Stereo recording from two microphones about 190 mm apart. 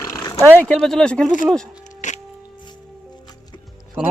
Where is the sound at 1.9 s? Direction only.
40° left (ahead or behind).